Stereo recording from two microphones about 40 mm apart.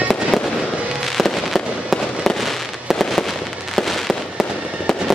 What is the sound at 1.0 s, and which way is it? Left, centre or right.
Fireworks, centre.